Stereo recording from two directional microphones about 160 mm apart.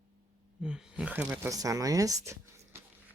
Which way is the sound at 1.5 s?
20° right (ahead or behind).